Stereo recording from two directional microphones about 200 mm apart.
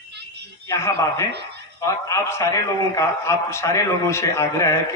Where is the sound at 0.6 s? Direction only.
15° left (ahead or behind).